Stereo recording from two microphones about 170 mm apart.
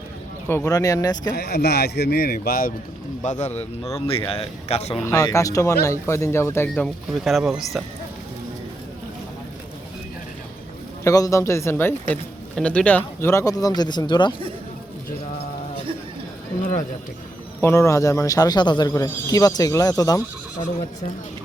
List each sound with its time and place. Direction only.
0.4 s speech: 15° left (ahead or behind)
1.4 s a man's voice: 70° left (ahead or behind)
3.2 s a man's voice: 40° left (ahead or behind)
5.0 s speech: 15° left (ahead or behind)
6.8 s speech: centre (ahead or behind)
11.0 s speech: 20° left (ahead or behind)
17.6 s speech: 15° left (ahead or behind)